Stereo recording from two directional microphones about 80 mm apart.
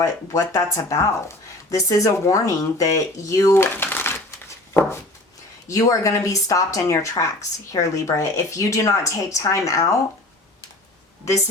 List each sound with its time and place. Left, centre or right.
0.0 s speech: left
3.8 s crumpling: left
4.7 s a sound: left
5.6 s speech: left